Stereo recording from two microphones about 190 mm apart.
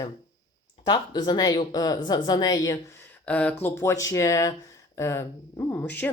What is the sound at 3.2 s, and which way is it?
Speech, 5° left (ahead or behind).